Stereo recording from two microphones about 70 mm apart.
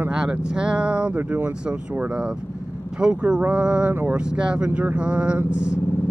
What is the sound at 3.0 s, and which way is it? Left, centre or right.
Speech, centre.